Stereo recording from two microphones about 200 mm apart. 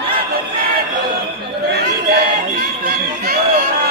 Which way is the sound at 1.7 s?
50° right (ahead or behind).